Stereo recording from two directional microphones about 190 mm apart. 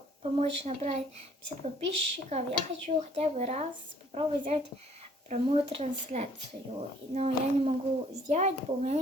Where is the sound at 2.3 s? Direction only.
35° right (ahead or behind).